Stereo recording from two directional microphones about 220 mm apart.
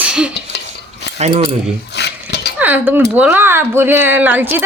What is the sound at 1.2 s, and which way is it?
Speech, 30° right (ahead or behind).